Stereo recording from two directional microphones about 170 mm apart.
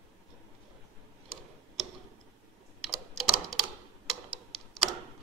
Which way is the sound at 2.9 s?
Centre (ahead or behind).